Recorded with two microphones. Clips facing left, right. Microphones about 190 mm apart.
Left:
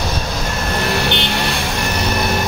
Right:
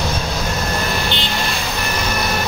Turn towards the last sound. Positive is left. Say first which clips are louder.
# left 3 dB
turn(degrees=65)  # may be behind; listen again after turning